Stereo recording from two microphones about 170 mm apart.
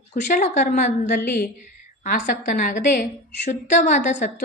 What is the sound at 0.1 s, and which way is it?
Speech, 45° left (ahead or behind).